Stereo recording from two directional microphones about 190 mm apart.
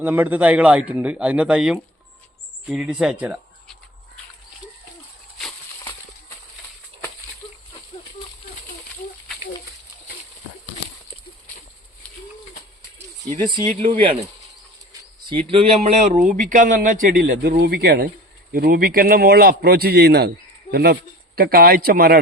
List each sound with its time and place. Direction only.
0.0 s a man's voice: 10° right (ahead or behind)
7.4 s a sound: 25° left (ahead or behind)
13.5 s speech: 25° right (ahead or behind)
15.3 s a man's voice: 30° right (ahead or behind)
17.2 s a man's voice: 55° right (ahead or behind)